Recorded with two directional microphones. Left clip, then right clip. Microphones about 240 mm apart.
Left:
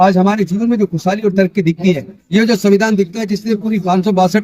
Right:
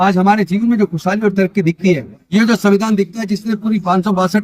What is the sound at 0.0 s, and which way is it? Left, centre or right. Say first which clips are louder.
Speech: left 1 dB; centre.